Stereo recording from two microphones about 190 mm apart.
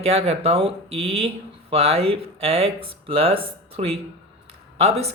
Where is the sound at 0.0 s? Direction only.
35° right (ahead or behind).